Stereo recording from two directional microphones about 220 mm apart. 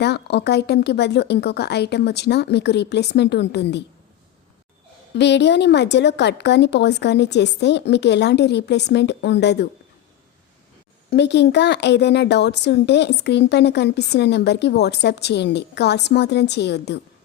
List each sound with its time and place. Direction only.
0.0 s speech: 50° left (ahead or behind)
5.1 s speech: 50° left (ahead or behind)
11.1 s speech: 50° left (ahead or behind)